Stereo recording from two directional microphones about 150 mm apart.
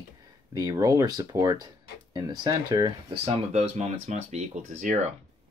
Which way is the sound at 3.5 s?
50° right (ahead or behind).